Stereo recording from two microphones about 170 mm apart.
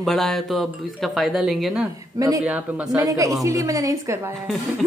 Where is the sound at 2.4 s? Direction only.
10° right (ahead or behind).